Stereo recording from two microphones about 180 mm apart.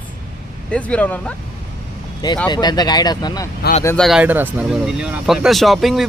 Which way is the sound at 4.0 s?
5° right (ahead or behind).